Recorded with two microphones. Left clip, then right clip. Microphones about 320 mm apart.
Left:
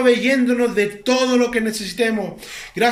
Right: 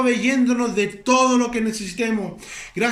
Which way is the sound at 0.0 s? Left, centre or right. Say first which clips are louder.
Left 4 dB; centre.